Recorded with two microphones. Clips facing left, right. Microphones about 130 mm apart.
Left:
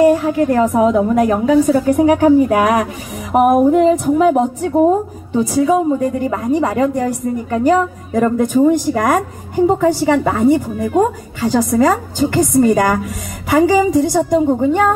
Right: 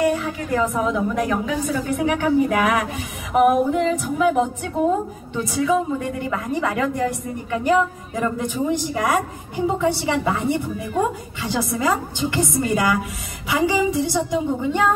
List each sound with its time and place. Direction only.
0.0 s a woman's voice: 40° left (ahead or behind)